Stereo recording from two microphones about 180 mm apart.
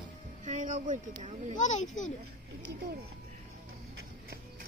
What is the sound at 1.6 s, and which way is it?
Speech, 45° left (ahead or behind).